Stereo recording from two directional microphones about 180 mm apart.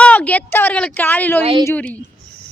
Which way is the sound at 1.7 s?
10° left (ahead or behind).